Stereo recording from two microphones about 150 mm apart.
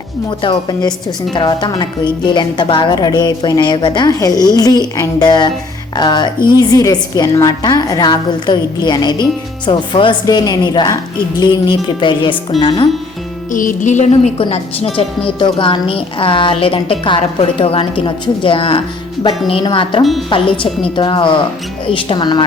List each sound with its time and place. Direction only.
0.3 s a woman's voice: 30° left (ahead or behind)
13.5 s music: 60° left (ahead or behind)
14.4 s speech: 40° left (ahead or behind)